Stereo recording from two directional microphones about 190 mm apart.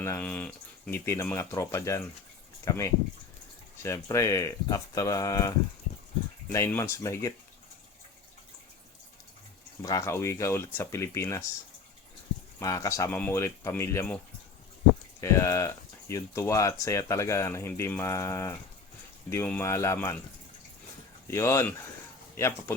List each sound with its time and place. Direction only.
0.0 s speech: 10° left (ahead or behind)
9.8 s speech: 15° left (ahead or behind)
12.5 s speech: 15° left (ahead or behind)
15.2 s speech: 15° left (ahead or behind)
21.2 s speech: 15° left (ahead or behind)